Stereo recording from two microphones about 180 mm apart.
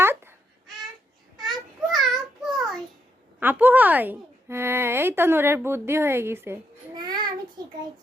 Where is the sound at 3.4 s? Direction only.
10° right (ahead or behind).